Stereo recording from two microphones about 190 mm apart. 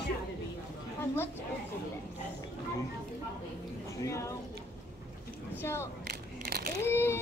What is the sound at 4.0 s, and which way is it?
Speech, 15° left (ahead or behind).